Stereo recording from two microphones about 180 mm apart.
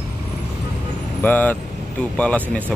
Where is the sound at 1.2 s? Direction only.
10° left (ahead or behind).